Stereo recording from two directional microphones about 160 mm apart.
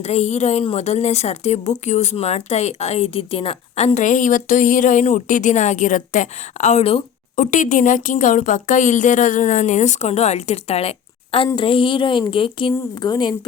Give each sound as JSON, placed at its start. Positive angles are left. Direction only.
{"t": 0.0, "sound": "a woman's voice", "side_deg": 45}
{"t": 7.3, "sound": "a woman's voice", "side_deg": 55}